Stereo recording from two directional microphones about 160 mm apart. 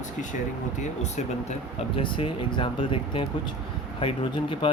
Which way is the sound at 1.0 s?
45° left (ahead or behind).